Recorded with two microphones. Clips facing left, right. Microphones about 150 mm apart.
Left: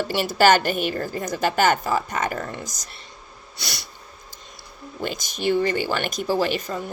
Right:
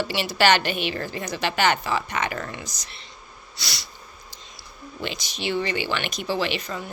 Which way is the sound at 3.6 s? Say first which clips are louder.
Left 2 dB; 55° left (ahead or behind).